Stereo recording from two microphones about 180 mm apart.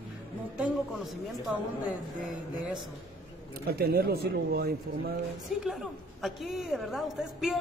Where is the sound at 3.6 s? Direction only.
60° right (ahead or behind).